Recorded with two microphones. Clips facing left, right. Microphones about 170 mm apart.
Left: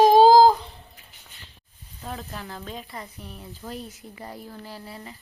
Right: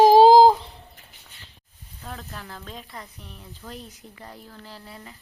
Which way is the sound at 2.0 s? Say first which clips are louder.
Left 3 dB; 10° left (ahead or behind).